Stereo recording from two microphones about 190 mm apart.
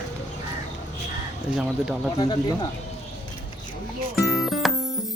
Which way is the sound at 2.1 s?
20° left (ahead or behind).